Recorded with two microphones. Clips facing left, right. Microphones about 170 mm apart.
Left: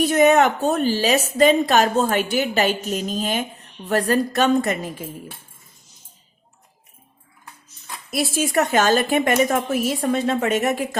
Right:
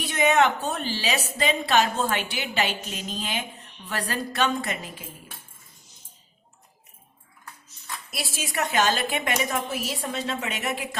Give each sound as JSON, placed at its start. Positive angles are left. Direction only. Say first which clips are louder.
{"t": 0.0, "sound": "a woman's voice", "louder": "left 6 dB", "side_deg": 45}
{"t": 8.1, "sound": "a woman's voice", "louder": "left 12 dB", "side_deg": 50}